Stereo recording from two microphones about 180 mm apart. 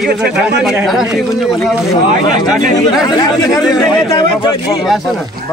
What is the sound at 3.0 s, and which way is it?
Speech, 20° left (ahead or behind).